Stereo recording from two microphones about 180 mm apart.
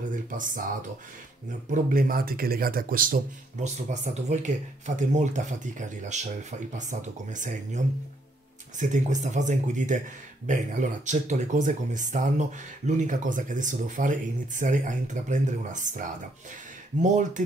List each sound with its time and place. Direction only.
0.1 s speech: 45° right (ahead or behind)
1.7 s speech: 50° right (ahead or behind)